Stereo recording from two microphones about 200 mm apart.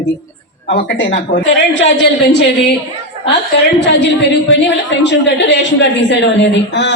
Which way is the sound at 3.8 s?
60° left (ahead or behind).